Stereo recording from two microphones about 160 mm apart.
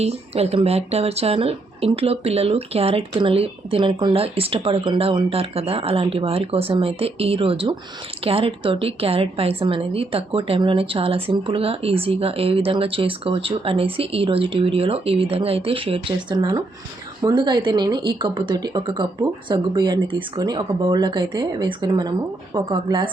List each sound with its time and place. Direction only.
0.0 s a woman's voice: 40° right (ahead or behind)